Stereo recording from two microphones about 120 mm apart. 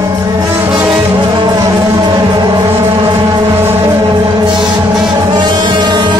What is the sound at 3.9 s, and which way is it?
Music, 35° right (ahead or behind).